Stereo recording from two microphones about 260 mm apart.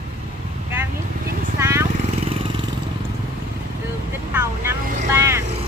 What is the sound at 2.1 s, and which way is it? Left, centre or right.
Vehicle, right.